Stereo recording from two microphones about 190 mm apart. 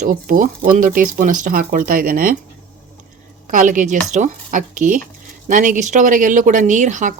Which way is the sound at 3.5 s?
45° right (ahead or behind).